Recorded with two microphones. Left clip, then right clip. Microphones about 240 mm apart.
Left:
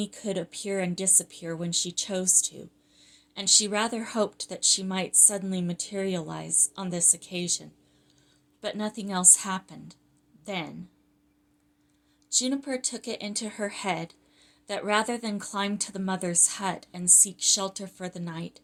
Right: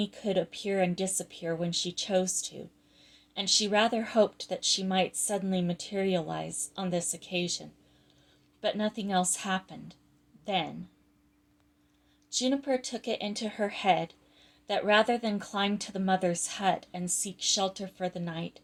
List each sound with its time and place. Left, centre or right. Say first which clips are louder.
0.0 s a woman's voice: right 2 dB; left
12.3 s a woman's voice: even; left